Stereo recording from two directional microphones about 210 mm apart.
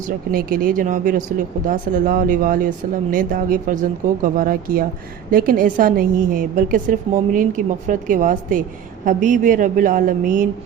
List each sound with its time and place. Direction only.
0.0 s a woman's voice: 45° right (ahead or behind)